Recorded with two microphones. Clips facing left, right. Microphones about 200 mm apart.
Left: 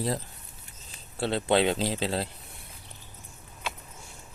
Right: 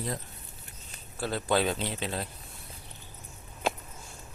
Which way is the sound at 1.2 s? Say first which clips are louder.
Left 3 dB; 25° left (ahead or behind).